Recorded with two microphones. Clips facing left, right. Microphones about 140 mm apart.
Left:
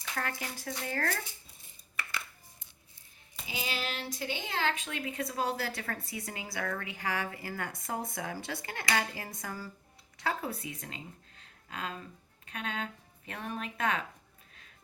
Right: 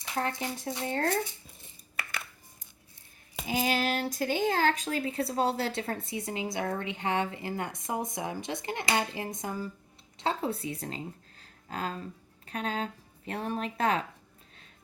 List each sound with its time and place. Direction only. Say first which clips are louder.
0.0 s speech: right 5 dB; 25° right (ahead or behind)
3.4 s speech: right 9 dB; 45° right (ahead or behind)